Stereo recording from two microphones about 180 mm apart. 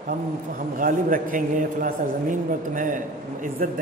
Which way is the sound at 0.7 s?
50° right (ahead or behind).